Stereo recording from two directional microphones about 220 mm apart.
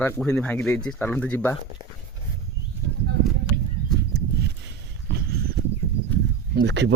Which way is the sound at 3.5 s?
50° right (ahead or behind).